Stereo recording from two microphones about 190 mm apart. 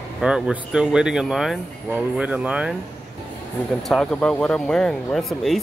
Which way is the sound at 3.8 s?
Centre (ahead or behind).